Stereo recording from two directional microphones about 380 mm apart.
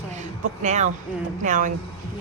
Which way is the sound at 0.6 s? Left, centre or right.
Centre.